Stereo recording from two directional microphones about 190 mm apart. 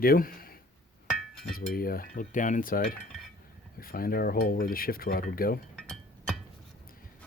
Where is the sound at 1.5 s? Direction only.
50° left (ahead or behind).